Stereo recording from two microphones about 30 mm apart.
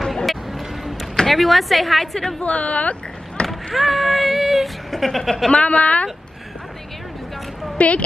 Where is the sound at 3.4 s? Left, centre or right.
Left.